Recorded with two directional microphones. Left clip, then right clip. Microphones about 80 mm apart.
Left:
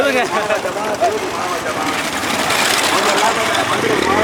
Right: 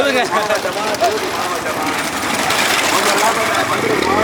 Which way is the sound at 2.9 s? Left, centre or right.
Right.